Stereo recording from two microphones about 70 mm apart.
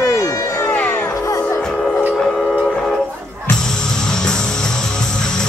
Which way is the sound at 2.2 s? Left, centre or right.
Centre.